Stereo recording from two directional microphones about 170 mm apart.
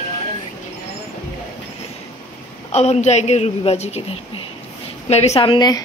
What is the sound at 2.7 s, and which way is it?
A woman's voice, 40° left (ahead or behind).